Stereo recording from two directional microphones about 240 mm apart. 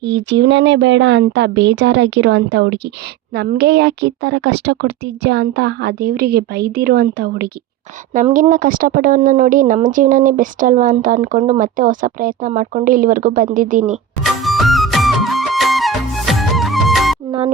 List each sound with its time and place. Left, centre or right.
0.0 s a woman's voice: right
14.4 s music: centre